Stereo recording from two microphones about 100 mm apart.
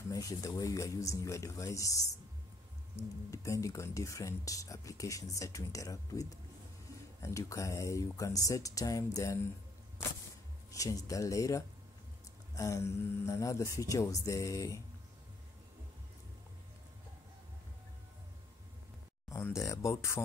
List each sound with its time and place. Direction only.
0.1 s speech: 35° left (ahead or behind)
3.3 s speech: 30° left (ahead or behind)
10.7 s speech: 35° left (ahead or behind)
19.2 s speech: 30° left (ahead or behind)